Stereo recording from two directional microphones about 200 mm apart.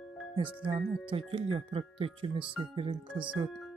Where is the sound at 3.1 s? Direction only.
5° right (ahead or behind).